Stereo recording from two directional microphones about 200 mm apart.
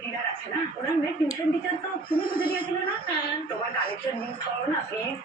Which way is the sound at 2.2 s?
45° left (ahead or behind).